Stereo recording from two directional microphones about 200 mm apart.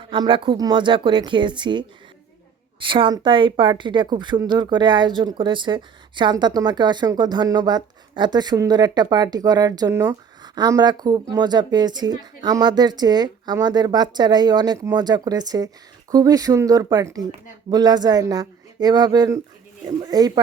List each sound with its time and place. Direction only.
0.0 s speech: 25° right (ahead or behind)
2.8 s speech: 25° right (ahead or behind)